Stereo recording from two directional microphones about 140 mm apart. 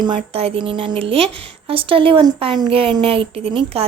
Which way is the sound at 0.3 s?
45° right (ahead or behind).